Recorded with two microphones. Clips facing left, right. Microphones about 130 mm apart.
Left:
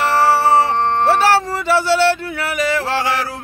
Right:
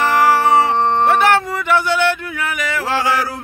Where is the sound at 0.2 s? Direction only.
30° left (ahead or behind).